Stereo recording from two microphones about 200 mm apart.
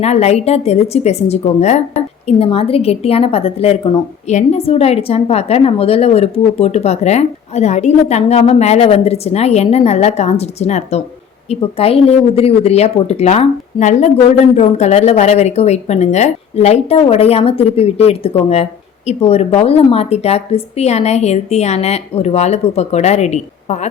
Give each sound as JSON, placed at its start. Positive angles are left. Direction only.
{"t": 0.0, "sound": "a woman's voice", "side_deg": 30}